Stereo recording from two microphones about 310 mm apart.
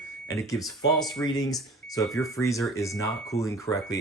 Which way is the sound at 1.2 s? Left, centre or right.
Centre.